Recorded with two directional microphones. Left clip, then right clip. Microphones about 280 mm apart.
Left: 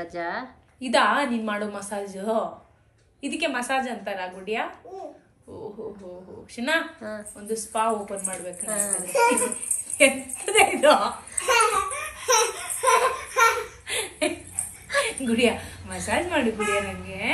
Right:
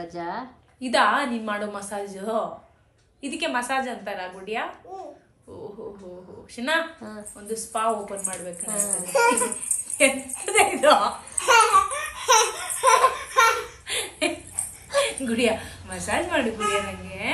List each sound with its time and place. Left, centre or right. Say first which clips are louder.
0.0 s a woman's voice: left 1 dB; centre
0.7 s a woman's voice: even; centre
5.5 s a sound: left 1 dB; centre
6.5 s a woman's voice: even; centre
7.0 s a woman's voice: left 4 dB; centre
7.3 s a woman's voice: left 1 dB; centre
9.9 s a sound: left 1 dB; centre
15.0 s a woman's voice: even; centre